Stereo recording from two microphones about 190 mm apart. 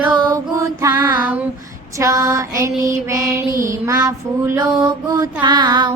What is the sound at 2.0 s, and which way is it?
A woman's voice, 20° right (ahead or behind).